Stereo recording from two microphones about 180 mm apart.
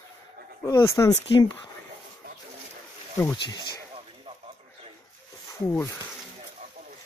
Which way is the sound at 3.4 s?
25° left (ahead or behind).